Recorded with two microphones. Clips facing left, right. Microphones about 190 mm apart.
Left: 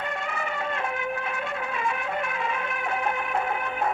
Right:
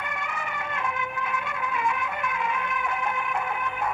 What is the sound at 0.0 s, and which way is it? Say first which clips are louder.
Music: left 3 dB; 25° left (ahead or behind).